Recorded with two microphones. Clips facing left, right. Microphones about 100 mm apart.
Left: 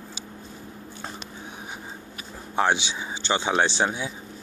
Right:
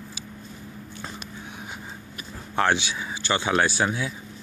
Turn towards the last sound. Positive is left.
turn(degrees=25)  # may be behind; listen again after turning